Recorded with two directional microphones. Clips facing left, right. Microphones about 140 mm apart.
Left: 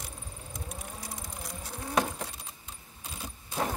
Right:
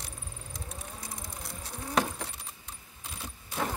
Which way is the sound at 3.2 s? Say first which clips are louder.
Left 1 dB; 15° left (ahead or behind).